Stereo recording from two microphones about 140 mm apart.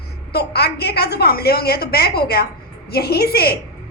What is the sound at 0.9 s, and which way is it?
A woman's voice, 90° left.